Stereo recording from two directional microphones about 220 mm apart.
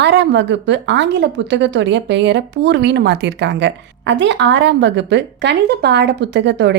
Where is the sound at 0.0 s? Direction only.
50° right (ahead or behind).